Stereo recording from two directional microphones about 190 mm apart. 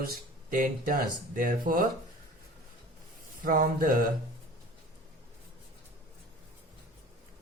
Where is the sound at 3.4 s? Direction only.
45° right (ahead or behind).